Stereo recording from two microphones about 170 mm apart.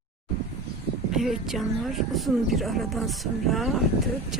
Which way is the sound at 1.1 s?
Centre (ahead or behind).